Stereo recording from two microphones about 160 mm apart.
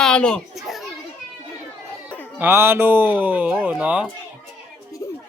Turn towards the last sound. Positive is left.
turn(degrees=-10)  # may be behind; listen again after turning